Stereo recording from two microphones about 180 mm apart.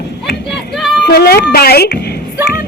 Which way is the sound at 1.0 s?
60° left (ahead or behind).